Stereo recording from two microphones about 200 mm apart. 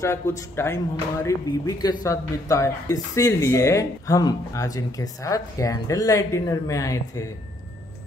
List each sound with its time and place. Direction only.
0.4 s speech: 15° left (ahead or behind)